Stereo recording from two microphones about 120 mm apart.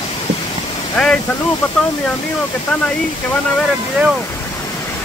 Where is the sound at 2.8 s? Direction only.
10° left (ahead or behind).